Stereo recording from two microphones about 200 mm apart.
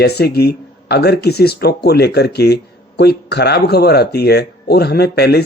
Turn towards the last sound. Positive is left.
turn(degrees=55)  # may be behind; listen again after turning